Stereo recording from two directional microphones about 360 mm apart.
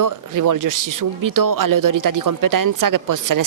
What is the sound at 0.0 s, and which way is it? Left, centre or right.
Speech, right.